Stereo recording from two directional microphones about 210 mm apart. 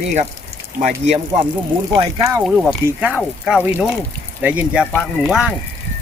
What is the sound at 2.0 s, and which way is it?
Speech, 20° right (ahead or behind).